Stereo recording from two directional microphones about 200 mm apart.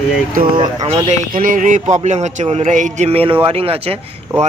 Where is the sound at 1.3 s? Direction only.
40° right (ahead or behind).